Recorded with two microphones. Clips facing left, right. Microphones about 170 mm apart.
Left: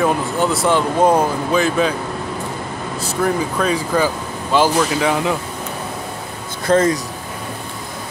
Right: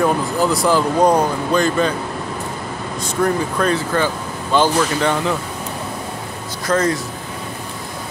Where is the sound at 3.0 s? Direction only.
5° left (ahead or behind).